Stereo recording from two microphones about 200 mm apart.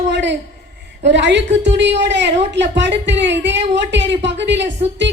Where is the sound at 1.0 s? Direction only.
65° right (ahead or behind).